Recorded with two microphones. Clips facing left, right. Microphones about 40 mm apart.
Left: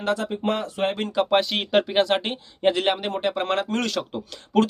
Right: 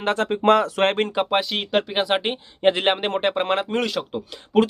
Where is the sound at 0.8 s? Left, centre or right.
Right.